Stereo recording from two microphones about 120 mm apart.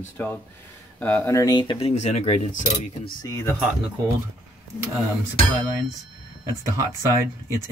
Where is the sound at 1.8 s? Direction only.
70° left (ahead or behind).